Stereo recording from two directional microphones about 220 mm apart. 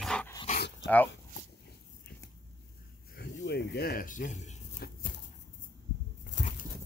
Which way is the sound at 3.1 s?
50° left (ahead or behind).